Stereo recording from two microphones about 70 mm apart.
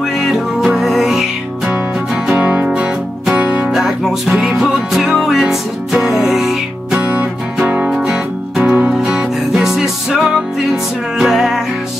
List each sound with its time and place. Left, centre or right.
0.2 s music: centre
2.2 s music: centre
7.0 s music: centre